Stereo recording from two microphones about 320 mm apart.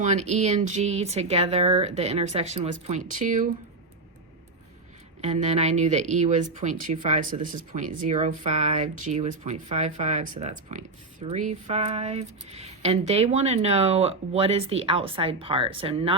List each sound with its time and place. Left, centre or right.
0.0 s speech: right
5.2 s speech: right